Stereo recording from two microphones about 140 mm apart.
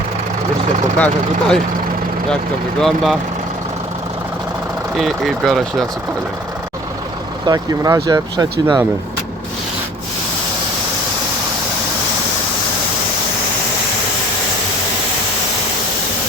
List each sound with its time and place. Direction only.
0.9 s speech: 5° left (ahead or behind)
2.8 s speech: centre (ahead or behind)
4.9 s speech: centre (ahead or behind)
7.4 s speech: 30° right (ahead or behind)